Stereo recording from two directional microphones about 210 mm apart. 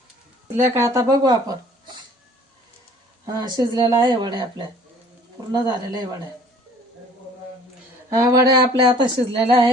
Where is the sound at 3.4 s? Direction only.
20° right (ahead or behind).